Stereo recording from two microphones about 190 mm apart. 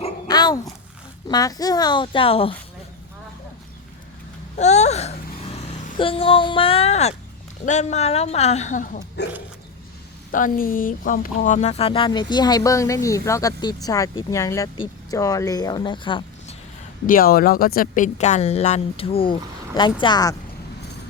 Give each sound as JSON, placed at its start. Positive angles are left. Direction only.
{"t": 0.3, "sound": "a sound", "side_deg": 20}
{"t": 1.3, "sound": "speech", "side_deg": 20}
{"t": 4.5, "sound": "a sound", "side_deg": 35}
{"t": 7.6, "sound": "speech", "side_deg": 40}
{"t": 9.2, "sound": "dog", "side_deg": 60}
{"t": 10.3, "sound": "speech", "side_deg": 45}
{"t": 17.1, "sound": "speech", "side_deg": 50}